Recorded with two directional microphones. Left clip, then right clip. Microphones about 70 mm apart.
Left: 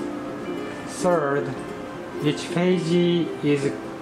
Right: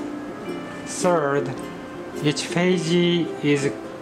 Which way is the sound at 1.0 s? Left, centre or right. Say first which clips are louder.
Right 1 dB; right.